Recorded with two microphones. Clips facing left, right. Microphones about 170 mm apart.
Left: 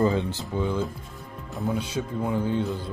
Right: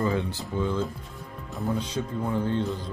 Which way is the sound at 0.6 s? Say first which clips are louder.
Left 1 dB; 15° left (ahead or behind).